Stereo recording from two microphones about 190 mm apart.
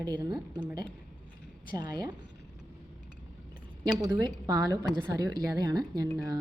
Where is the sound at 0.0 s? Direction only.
20° right (ahead or behind).